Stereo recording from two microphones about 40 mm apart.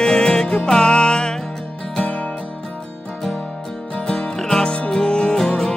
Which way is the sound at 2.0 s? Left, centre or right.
Left.